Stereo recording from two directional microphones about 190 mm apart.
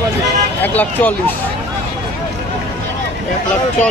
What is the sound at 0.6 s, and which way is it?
Speech, 10° left (ahead or behind).